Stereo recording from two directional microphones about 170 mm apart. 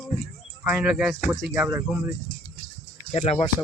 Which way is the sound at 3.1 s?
40° left (ahead or behind).